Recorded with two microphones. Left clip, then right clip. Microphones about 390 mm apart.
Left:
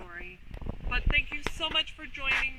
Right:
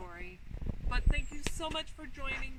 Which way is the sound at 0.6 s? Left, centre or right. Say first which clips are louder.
Left 6 dB; left.